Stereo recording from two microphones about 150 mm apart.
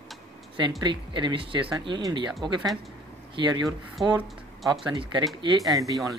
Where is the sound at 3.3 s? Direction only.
30° right (ahead or behind).